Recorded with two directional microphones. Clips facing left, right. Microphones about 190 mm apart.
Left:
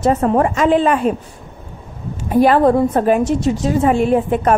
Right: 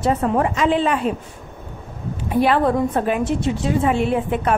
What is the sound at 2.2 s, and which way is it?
A woman's voice, 40° left (ahead or behind).